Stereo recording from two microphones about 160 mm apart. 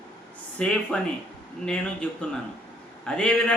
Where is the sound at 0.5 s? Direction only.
5° left (ahead or behind).